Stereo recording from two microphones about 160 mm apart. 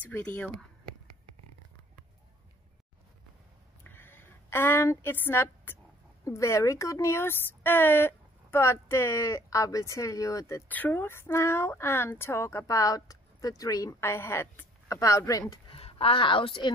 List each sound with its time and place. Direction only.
0.0 s speech: 10° left (ahead or behind)
3.8 s a sound: 15° left (ahead or behind)
6.2 s speech: 20° left (ahead or behind)
15.7 s a woman's voice: 35° left (ahead or behind)